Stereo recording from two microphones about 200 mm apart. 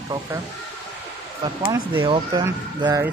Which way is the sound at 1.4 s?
20° right (ahead or behind).